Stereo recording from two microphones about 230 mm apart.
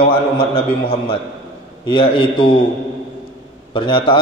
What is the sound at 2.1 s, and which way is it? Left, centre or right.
Speech, left.